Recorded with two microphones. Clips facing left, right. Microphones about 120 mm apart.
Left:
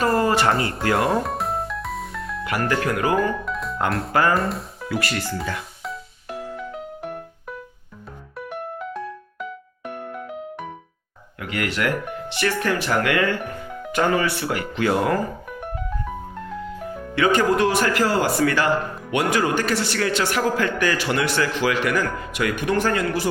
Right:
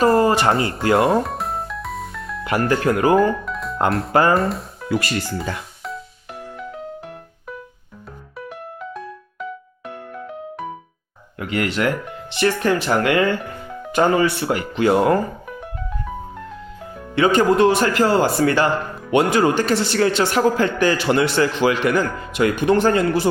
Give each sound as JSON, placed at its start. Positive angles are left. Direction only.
{"t": 0.2, "sound": "a sound", "side_deg": -25}
{"t": 0.9, "sound": "a man's voice", "side_deg": -25}
{"t": 1.2, "sound": "music", "side_deg": 0}
{"t": 2.5, "sound": "a man's voice", "side_deg": -30}
{"t": 3.3, "sound": "music", "side_deg": 0}
{"t": 4.1, "sound": "a man's voice", "side_deg": -25}
{"t": 4.4, "sound": "speech", "side_deg": 0}
{"t": 4.9, "sound": "a man's voice", "side_deg": -25}
{"t": 9.9, "sound": "music", "side_deg": 20}
{"t": 11.3, "sound": "a man's voice", "side_deg": -25}
{"t": 17.2, "sound": "a man's voice", "side_deg": -25}